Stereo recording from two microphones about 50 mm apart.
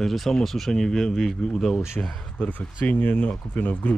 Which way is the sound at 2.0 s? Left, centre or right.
Left.